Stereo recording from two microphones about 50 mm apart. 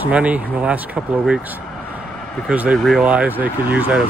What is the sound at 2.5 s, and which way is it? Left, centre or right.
Speech, right.